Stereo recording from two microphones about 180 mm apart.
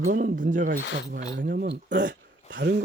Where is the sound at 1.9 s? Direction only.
45° right (ahead or behind).